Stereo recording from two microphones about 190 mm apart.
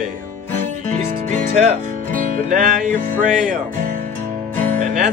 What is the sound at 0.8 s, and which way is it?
Music, 40° right (ahead or behind).